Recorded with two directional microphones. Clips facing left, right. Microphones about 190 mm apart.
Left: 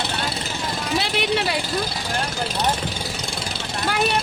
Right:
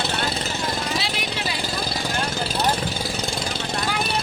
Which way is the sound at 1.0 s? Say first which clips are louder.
Left 6 dB; 65° left (ahead or behind).